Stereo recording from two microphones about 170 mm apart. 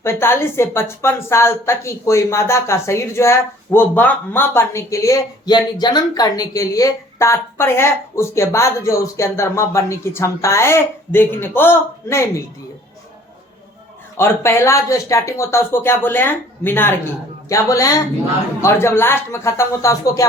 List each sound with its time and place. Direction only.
0.0 s a woman's voice: 15° left (ahead or behind)
14.2 s a woman's voice: 15° left (ahead or behind)